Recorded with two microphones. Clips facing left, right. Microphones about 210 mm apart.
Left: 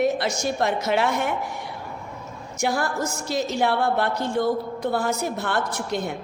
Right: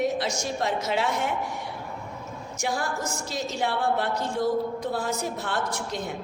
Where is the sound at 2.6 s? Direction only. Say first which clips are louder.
Left 5 dB; 65° left (ahead or behind).